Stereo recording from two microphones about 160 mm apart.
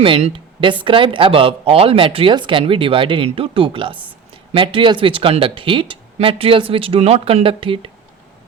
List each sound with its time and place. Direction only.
0.0 s speech: 35° right (ahead or behind)